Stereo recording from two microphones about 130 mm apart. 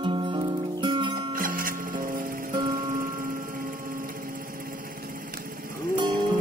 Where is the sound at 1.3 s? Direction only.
90° right.